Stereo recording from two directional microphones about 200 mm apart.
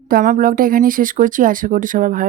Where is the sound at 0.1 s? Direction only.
45° right (ahead or behind).